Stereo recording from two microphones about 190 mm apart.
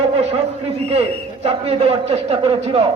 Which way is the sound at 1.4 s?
35° right (ahead or behind).